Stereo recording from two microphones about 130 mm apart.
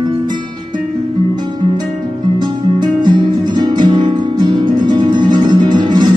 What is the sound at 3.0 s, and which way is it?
Music, 35° right (ahead or behind).